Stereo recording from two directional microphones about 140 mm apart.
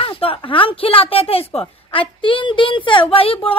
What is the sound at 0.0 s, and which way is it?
A woman's voice, 40° left (ahead or behind).